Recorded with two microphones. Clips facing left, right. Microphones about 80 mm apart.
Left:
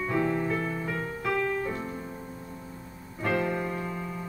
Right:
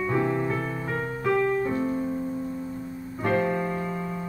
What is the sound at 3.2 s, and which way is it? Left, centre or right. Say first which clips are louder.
Piano: right 3 dB; right.